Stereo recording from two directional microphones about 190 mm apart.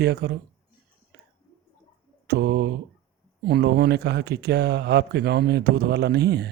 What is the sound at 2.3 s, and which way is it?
Speech, 60° right (ahead or behind).